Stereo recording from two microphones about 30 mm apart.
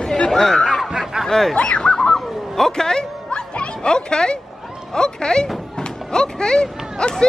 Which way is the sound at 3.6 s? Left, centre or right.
Left.